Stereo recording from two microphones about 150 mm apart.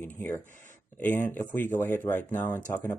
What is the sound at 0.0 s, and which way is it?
Speech, 15° left (ahead or behind).